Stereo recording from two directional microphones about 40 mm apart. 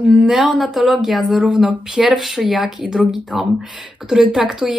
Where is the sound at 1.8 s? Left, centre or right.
Centre.